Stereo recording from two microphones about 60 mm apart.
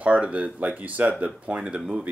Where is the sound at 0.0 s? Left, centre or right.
Right.